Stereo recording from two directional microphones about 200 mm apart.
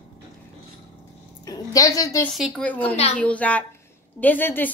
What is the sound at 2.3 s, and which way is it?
A woman's voice, centre (ahead or behind).